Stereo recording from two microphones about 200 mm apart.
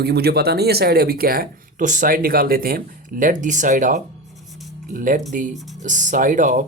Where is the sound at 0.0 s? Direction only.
55° right (ahead or behind).